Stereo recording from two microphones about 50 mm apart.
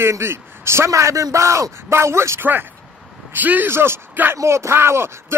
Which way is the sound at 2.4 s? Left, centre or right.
Right.